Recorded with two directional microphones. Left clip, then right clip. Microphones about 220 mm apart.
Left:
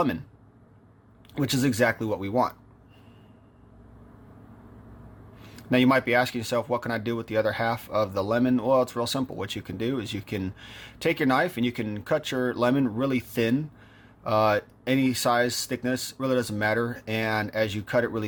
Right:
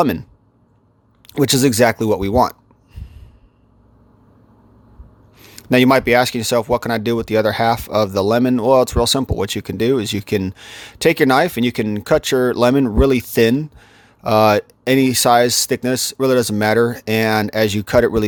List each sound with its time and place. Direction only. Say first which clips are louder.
0.0 s speech: right 10 dB; 45° right (ahead or behind)
1.3 s speech: right 11 dB; 50° right (ahead or behind)
5.4 s speech: right 9 dB; 45° right (ahead or behind)